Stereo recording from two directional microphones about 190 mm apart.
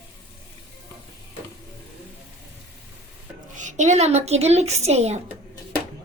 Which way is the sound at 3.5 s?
40° right (ahead or behind).